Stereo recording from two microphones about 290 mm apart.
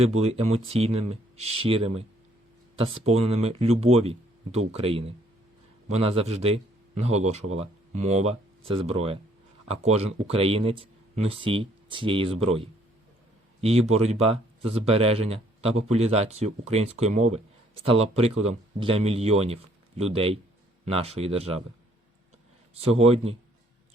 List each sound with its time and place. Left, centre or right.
0.2 s speech: right
22.7 s speech: right